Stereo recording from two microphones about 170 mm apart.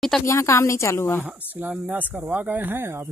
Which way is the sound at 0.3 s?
15° left (ahead or behind).